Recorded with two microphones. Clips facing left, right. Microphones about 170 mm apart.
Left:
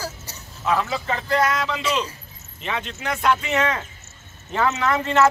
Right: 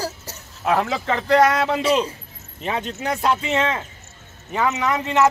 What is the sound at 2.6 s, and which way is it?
Speech, 40° right (ahead or behind).